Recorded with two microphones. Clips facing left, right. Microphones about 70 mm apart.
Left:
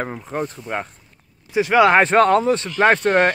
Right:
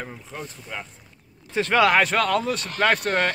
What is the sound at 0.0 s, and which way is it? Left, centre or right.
Speech, left.